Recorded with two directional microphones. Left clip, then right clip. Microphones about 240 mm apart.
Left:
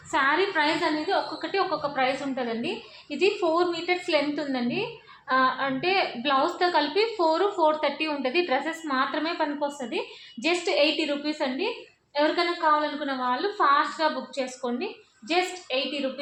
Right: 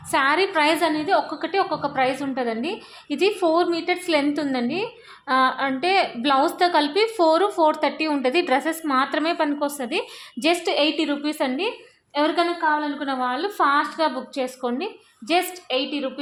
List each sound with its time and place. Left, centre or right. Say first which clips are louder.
0.1 s a woman's voice: right 4 dB; right
13.1 s a woman's voice: right 3 dB; right